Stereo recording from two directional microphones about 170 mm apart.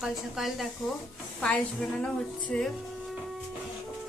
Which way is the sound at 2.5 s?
5° left (ahead or behind).